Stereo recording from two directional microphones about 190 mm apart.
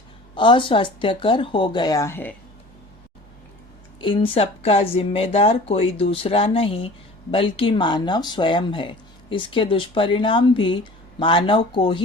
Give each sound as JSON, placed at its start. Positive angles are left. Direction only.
{"t": 0.3, "sound": "speech", "side_deg": 25}
{"t": 4.0, "sound": "speech", "side_deg": 25}